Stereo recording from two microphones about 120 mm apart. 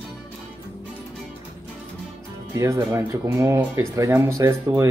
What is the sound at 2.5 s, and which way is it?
Speech, 25° right (ahead or behind).